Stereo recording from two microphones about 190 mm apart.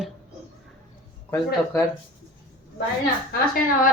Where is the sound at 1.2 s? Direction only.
15° left (ahead or behind).